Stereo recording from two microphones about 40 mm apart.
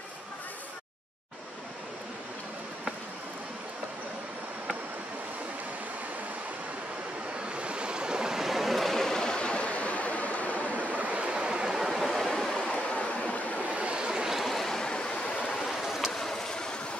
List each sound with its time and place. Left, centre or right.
7.5 s waves: right; by 8.9 s centre
8.9 s stream: centre; by 10.6 s left
10.7 s waterfall: right; by 12.4 s centre
12.4 s vehicle: left
13.7 s vehicle: right
14.3 s waves: centre; by 15.3 s left
15.4 s vehicle: centre
15.8 s vehicle: centre
16.1 s vehicle: centre